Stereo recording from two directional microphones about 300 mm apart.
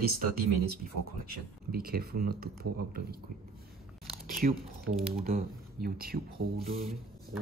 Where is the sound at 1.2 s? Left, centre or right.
Right.